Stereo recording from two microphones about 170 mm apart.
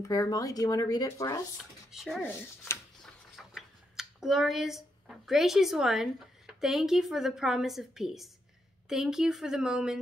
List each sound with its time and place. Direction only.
0.1 s speech: 20° left (ahead or behind)
1.6 s speech: centre (ahead or behind)